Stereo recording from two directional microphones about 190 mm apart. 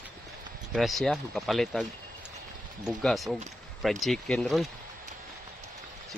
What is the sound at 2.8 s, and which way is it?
Speech, centre (ahead or behind).